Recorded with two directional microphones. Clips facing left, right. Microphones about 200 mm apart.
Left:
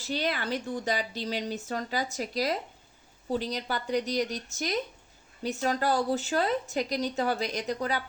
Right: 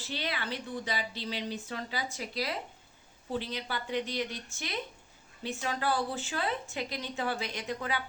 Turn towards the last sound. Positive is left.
turn(degrees=40)  # may be behind; listen again after turning